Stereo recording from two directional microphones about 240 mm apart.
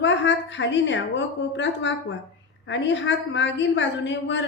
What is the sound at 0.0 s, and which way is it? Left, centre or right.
A woman's voice, left.